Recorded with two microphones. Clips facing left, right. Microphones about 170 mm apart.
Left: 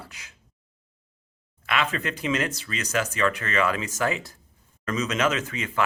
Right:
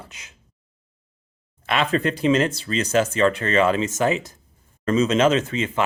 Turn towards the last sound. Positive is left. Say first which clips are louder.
# right 8 dB
turn(degrees=-25)  # may be behind; listen again after turning